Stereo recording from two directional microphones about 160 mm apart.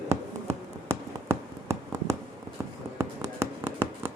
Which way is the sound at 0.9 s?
20° right (ahead or behind).